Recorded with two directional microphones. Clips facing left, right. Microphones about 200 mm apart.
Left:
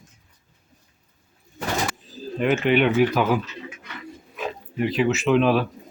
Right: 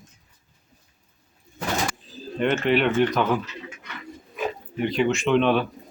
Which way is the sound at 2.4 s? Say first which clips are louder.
Left 2 dB; 5° left (ahead or behind).